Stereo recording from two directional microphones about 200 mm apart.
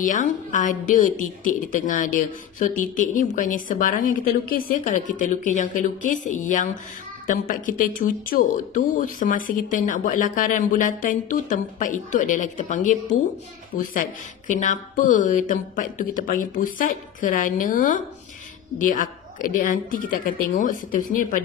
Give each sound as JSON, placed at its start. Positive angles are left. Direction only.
{"t": 0.0, "sound": "a woman's voice", "side_deg": 40}